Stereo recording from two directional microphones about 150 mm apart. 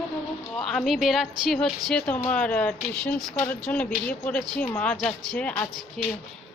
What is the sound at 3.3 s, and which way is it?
Speech, 20° left (ahead or behind).